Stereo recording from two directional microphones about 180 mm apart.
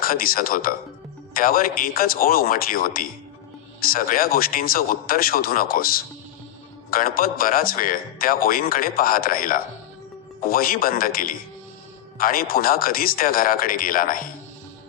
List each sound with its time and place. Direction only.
0.0 s speech: 55° left (ahead or behind)